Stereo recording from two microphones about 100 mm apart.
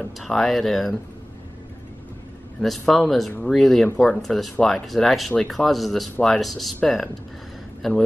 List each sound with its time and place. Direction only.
0.2 s speech: centre (ahead or behind)
2.9 s speech: centre (ahead or behind)